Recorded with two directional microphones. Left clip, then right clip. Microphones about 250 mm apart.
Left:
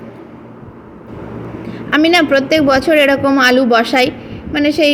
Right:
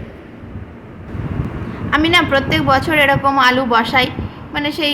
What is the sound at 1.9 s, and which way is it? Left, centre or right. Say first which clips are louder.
A woman's voice: left 2 dB; centre.